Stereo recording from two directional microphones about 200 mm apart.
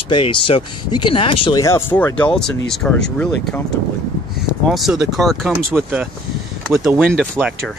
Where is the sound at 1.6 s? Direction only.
15° left (ahead or behind).